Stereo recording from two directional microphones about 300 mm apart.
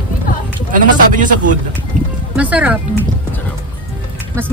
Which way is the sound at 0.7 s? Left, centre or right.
Right.